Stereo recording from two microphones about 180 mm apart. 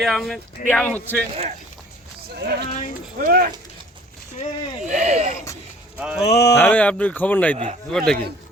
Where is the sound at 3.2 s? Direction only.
50° right (ahead or behind).